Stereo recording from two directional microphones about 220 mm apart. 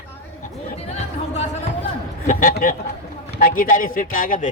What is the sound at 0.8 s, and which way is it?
A man's voice, 30° left (ahead or behind).